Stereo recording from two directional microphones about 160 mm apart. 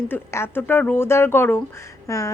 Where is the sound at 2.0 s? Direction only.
20° left (ahead or behind).